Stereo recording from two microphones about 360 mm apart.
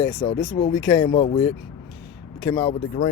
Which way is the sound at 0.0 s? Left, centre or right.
Centre.